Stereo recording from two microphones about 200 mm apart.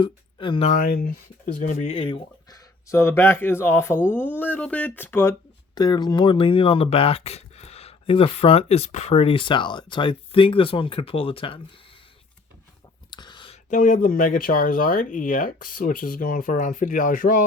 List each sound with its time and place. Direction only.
0.0 s speech: 25° left (ahead or behind)
0.7 s speech: 45° left (ahead or behind); by 2.6 s 25° left (ahead or behind)
2.9 s speech: 10° left (ahead or behind)
5.7 s speech: 20° left (ahead or behind)
13.1 s a sound: 20° left (ahead or behind)
13.7 s speech: 40° left (ahead or behind)